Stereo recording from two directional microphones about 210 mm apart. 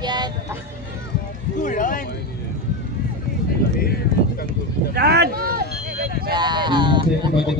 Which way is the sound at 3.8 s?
45° left (ahead or behind).